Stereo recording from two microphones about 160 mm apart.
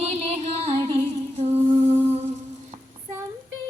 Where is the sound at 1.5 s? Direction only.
15° right (ahead or behind).